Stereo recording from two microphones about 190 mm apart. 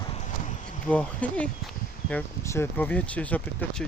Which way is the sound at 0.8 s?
5° left (ahead or behind).